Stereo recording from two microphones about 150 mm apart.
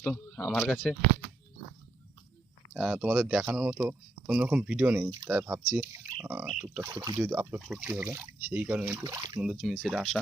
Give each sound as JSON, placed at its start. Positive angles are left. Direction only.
{"t": 0.0, "sound": "speech", "side_deg": 10}
{"t": 2.7, "sound": "speech", "side_deg": -5}
{"t": 6.8, "sound": "speech", "side_deg": -25}
{"t": 7.2, "sound": "speech", "side_deg": -10}
{"t": 9.4, "sound": "speech", "side_deg": 0}